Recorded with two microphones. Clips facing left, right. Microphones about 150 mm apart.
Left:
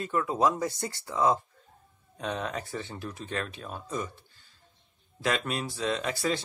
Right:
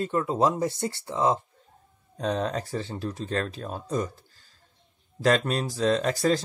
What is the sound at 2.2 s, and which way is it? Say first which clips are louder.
Speech: right 6 dB; 35° right (ahead or behind).